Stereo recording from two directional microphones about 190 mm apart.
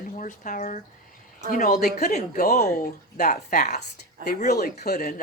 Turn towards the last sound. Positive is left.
turn(degrees=50)  # may be behind; listen again after turning